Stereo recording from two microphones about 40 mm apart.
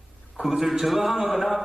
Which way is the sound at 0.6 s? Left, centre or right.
Centre.